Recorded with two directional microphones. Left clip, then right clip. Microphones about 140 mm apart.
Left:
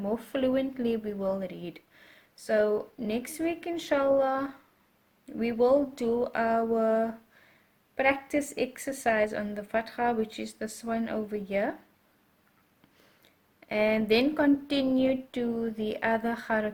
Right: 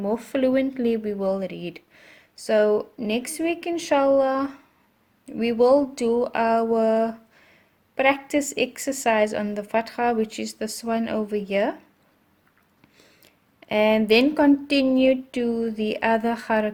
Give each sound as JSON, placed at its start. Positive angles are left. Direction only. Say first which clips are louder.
{"t": 0.0, "sound": "speech", "louder": "right 6 dB", "side_deg": -20}
{"t": 13.2, "sound": "speech", "louder": "right 7 dB", "side_deg": -25}